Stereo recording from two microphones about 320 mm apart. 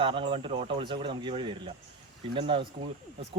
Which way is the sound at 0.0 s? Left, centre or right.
Centre.